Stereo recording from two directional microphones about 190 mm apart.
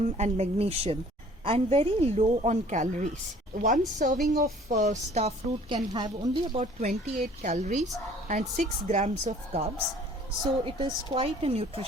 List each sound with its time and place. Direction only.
0.2 s a woman's voice: 35° right (ahead or behind)
6.6 s a woman's voice: 40° right (ahead or behind)
7.0 s speech: 50° right (ahead or behind)
7.5 s a woman's voice: 40° right (ahead or behind)
10.7 s a woman's voice: 25° right (ahead or behind)